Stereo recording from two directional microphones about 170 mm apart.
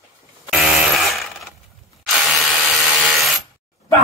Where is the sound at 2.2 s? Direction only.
Centre (ahead or behind).